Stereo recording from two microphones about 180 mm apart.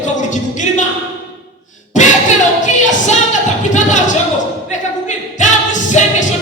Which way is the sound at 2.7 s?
40° left (ahead or behind).